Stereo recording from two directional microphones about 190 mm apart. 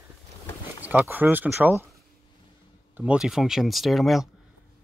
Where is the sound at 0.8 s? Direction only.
10° right (ahead or behind).